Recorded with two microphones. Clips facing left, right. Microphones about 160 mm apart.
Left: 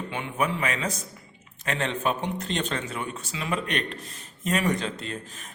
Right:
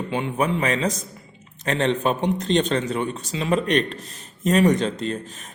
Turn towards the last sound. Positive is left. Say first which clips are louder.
# right 8 dB
turn(degrees=-40)  # may be behind; listen again after turning